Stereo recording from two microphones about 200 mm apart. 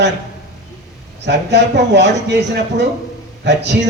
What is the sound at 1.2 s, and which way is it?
A man's voice, 60° right (ahead or behind).